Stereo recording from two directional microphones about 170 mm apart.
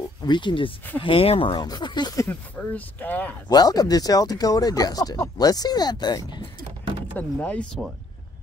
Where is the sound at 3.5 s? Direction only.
25° left (ahead or behind).